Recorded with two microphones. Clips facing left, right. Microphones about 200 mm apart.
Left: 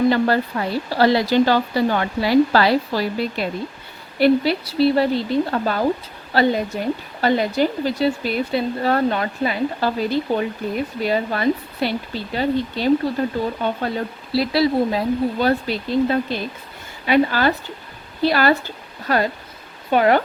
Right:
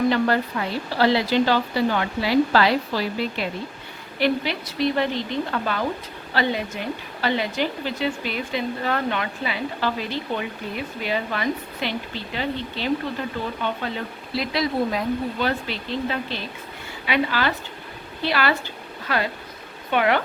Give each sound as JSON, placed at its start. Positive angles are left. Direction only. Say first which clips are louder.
{"t": 0.1, "sound": "a woman's voice", "louder": "left 3 dB", "side_deg": 40}
{"t": 14.3, "sound": "a woman's voice", "louder": "left 6 dB", "side_deg": 30}